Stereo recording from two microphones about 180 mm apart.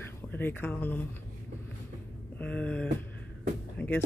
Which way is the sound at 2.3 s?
5° left (ahead or behind).